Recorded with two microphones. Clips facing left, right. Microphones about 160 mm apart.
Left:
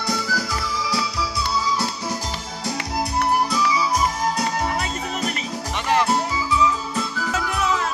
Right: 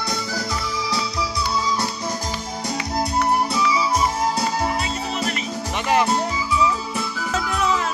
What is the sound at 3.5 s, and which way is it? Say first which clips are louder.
Music: right 1 dB; 25° right (ahead or behind).